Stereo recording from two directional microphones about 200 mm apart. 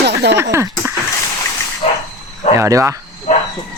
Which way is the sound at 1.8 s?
30° left (ahead or behind).